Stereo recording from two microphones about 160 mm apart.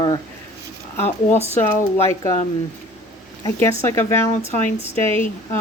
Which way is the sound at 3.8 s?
20° left (ahead or behind).